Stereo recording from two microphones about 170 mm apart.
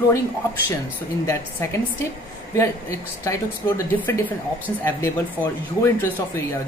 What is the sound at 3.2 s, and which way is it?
Speech, 15° left (ahead or behind).